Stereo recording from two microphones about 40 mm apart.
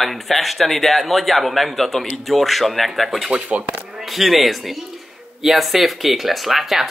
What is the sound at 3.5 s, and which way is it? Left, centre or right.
Speech, right.